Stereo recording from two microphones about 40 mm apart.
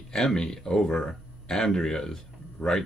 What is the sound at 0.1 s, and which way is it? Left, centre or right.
Speech, centre.